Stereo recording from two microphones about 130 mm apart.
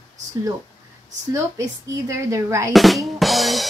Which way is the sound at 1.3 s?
20° right (ahead or behind).